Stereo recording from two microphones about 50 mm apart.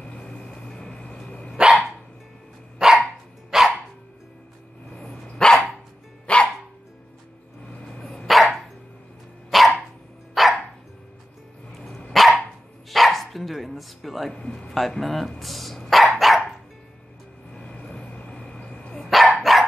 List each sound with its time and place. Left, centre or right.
0.0 s dog: centre
2.8 s dog: centre
4.9 s dog: left
7.8 s dog: left
8.3 s dog: centre
11.7 s dog: centre
12.9 s speech: centre
14.3 s speech: left
14.7 s speech: centre
15.9 s dog: centre
17.6 s vehicle: left
19.0 s dog: centre